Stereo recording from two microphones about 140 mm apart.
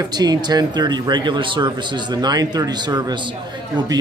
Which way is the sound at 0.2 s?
30° right (ahead or behind).